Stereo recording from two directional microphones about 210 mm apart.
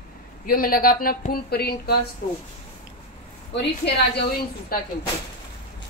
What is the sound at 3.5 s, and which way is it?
A woman's voice, 55° left (ahead or behind).